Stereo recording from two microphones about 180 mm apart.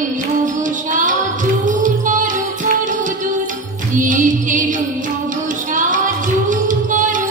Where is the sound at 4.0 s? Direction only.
45° right (ahead or behind).